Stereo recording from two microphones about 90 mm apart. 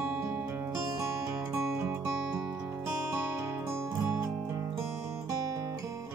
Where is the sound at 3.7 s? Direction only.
30° right (ahead or behind).